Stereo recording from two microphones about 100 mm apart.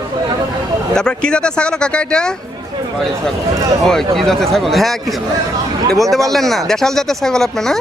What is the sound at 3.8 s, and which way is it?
Speech, 5° left (ahead or behind).